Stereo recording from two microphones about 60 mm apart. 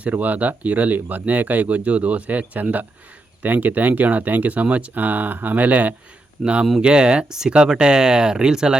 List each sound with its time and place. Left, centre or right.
0.0 s speech: right